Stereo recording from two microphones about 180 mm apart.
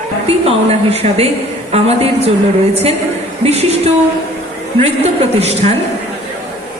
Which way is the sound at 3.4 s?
35° right (ahead or behind).